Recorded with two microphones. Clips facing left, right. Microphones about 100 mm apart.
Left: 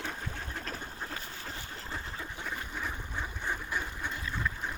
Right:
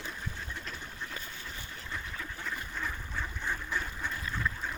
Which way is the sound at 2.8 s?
15° left (ahead or behind).